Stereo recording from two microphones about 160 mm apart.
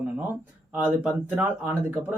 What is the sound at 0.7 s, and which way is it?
Speech, 10° right (ahead or behind).